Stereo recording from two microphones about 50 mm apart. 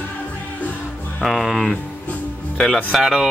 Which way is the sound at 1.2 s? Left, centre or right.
Centre.